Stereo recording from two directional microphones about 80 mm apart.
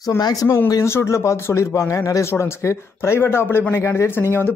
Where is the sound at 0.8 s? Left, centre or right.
Left.